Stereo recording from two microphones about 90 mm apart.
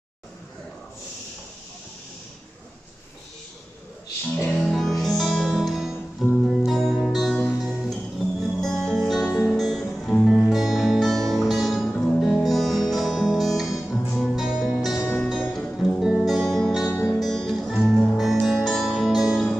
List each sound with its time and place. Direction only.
4.6 s music: centre (ahead or behind)
15.0 s music: 25° left (ahead or behind)
15.5 s music: centre (ahead or behind)